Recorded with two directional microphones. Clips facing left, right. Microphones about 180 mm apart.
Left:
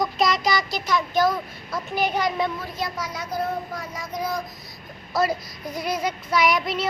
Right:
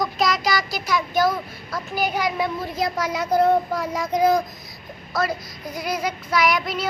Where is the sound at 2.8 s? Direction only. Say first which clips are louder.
Right 8 dB; 90° right.